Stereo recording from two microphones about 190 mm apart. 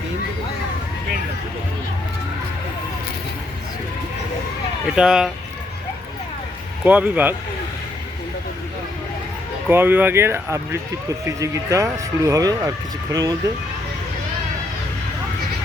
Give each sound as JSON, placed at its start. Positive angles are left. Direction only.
{"t": 4.9, "sound": "speech", "side_deg": -5}
{"t": 6.8, "sound": "speech", "side_deg": -10}
{"t": 9.6, "sound": "speech", "side_deg": -10}